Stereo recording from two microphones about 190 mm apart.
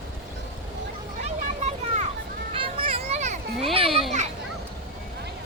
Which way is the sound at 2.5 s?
30° right (ahead or behind).